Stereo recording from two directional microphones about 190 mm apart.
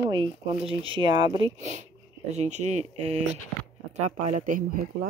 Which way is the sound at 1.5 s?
35° right (ahead or behind).